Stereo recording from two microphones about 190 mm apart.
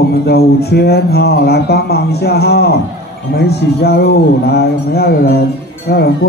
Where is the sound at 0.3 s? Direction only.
60° left (ahead or behind).